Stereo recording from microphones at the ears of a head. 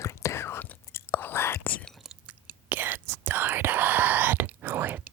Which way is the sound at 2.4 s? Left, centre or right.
Right.